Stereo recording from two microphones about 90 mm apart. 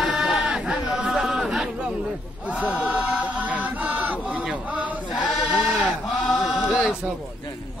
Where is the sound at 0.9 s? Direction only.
5° right (ahead or behind).